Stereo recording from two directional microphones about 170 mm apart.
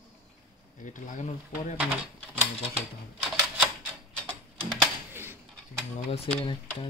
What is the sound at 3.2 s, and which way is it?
Typewriter, 5° right (ahead or behind).